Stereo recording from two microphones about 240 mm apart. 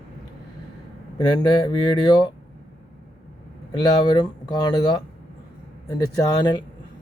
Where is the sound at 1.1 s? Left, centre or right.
Centre.